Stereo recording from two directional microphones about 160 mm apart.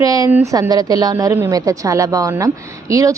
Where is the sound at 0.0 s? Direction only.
20° right (ahead or behind).